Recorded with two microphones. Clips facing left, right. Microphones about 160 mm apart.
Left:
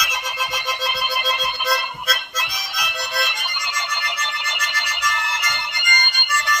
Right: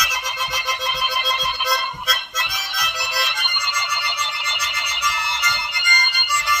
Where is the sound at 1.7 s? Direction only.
5° left (ahead or behind).